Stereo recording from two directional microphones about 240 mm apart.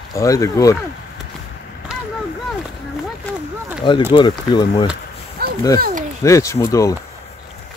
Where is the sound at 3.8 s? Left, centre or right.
Centre.